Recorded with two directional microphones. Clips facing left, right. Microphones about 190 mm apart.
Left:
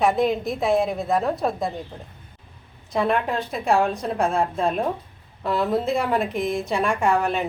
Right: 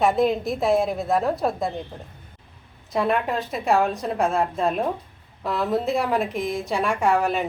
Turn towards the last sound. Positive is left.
turn(degrees=0)  # may be behind; listen again after turning